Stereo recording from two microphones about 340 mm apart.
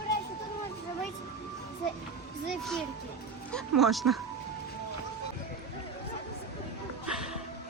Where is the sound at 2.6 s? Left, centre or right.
Centre.